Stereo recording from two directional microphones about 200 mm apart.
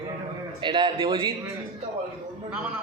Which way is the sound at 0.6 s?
25° right (ahead or behind).